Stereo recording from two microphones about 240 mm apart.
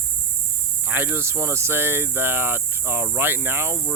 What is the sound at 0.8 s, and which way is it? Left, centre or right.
Speech, centre.